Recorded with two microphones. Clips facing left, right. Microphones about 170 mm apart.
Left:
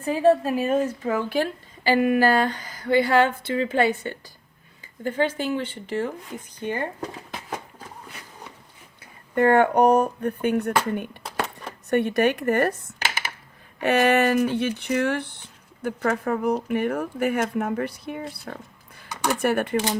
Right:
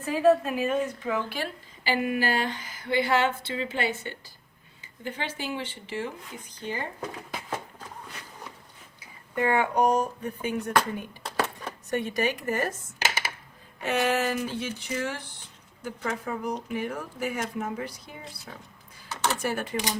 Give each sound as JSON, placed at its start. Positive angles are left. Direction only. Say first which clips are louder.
{"t": 0.0, "sound": "a woman's voice", "louder": "left 2 dB", "side_deg": 30}
{"t": 9.0, "sound": "speech", "louder": "left 7 dB", "side_deg": 55}
{"t": 11.2, "sound": "a sound", "louder": "even", "side_deg": 0}
{"t": 11.9, "sound": "speech", "louder": "left 7 dB", "side_deg": 60}
{"t": 13.8, "sound": "speech", "louder": "left 7 dB", "side_deg": 65}
{"t": 19.0, "sound": "a sound", "louder": "left 3 dB", "side_deg": 15}
{"t": 19.4, "sound": "speech", "louder": "left 7 dB", "side_deg": 60}